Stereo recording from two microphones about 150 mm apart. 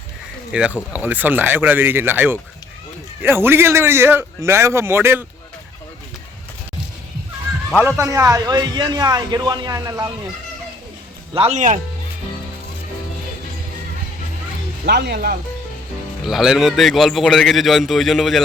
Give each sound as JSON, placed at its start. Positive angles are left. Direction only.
{"t": 0.5, "sound": "a man's voice", "side_deg": -10}
{"t": 7.9, "sound": "a man's voice", "side_deg": -20}
{"t": 11.3, "sound": "speech", "side_deg": -50}
{"t": 14.8, "sound": "speech", "side_deg": -90}
{"t": 16.2, "sound": "a man's voice", "side_deg": 0}